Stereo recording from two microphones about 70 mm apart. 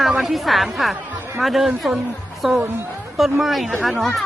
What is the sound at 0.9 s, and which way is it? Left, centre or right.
Chatter, right.